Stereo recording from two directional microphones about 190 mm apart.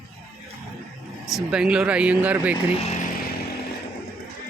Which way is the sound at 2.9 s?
40° left (ahead or behind).